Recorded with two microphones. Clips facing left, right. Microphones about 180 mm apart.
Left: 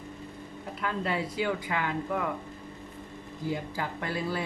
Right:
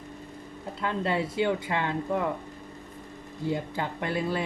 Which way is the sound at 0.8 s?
25° right (ahead or behind).